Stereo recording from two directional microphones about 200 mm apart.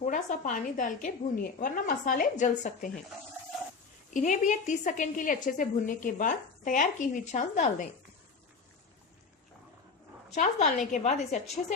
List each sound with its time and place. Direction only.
0.0 s a woman's voice: 40° left (ahead or behind)
4.1 s a woman's voice: 40° left (ahead or behind)
10.3 s a woman's voice: 35° left (ahead or behind)